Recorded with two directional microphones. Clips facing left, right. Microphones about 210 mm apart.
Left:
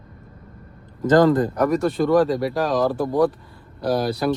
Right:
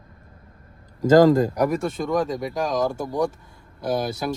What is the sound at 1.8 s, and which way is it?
Speech, centre (ahead or behind).